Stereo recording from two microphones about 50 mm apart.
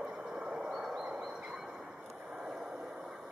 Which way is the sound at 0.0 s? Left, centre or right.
Centre.